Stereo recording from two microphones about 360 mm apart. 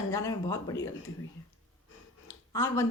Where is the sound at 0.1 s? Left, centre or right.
Centre.